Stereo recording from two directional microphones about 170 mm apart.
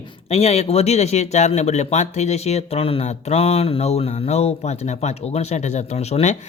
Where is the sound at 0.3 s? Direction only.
40° left (ahead or behind).